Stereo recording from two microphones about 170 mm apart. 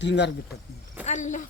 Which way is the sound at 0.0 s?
90° left.